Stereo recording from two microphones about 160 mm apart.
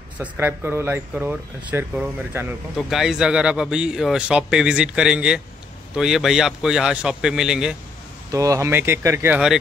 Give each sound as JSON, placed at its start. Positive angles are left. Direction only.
{"t": 0.2, "sound": "a man's voice", "side_deg": -10}
{"t": 8.3, "sound": "speech", "side_deg": -20}